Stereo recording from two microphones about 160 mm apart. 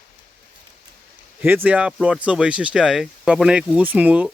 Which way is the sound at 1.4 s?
10° right (ahead or behind).